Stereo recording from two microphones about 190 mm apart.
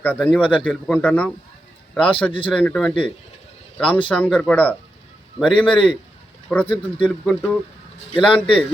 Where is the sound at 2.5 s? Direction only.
5° left (ahead or behind).